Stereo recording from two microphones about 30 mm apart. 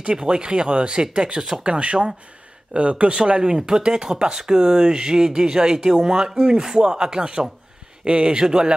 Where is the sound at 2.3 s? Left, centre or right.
Right.